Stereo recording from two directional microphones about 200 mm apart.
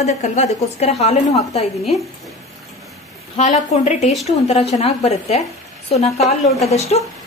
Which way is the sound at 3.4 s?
35° left (ahead or behind).